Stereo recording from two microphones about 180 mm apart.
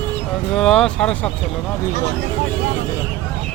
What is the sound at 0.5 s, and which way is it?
Speech, 5° left (ahead or behind).